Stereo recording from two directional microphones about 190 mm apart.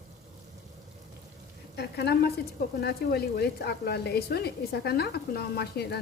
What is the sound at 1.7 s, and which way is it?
Speech, 60° left (ahead or behind).